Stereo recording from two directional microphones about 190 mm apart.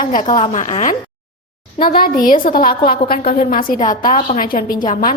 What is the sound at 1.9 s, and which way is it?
A woman's voice, 50° left (ahead or behind).